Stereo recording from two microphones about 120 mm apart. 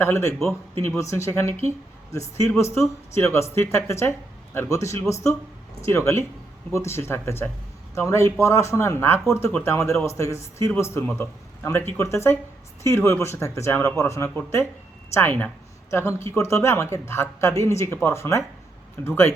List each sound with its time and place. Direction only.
0.0 s speech: 20° left (ahead or behind)